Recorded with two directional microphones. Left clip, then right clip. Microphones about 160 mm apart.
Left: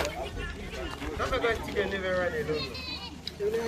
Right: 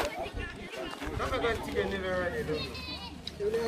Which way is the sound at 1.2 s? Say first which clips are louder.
Left 3 dB; 70° right (ahead or behind).